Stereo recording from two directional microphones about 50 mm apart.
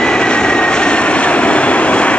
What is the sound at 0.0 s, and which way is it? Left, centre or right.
Vehicle, centre.